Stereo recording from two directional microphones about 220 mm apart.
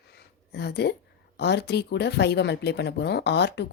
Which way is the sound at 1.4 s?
50° left (ahead or behind).